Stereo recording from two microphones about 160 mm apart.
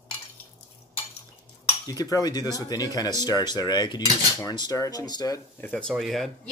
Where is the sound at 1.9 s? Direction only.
25° left (ahead or behind).